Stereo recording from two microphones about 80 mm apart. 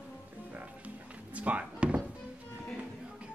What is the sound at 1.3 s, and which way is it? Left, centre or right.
Chop, centre.